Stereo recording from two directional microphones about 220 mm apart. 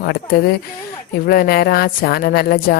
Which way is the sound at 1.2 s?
40° left (ahead or behind).